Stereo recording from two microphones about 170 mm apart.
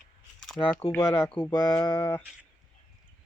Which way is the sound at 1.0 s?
30° left (ahead or behind).